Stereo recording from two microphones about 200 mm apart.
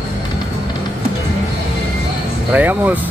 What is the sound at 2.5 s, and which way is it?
Speech, 10° right (ahead or behind).